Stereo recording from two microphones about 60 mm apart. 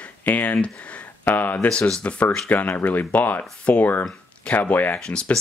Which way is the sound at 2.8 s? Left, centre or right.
Left.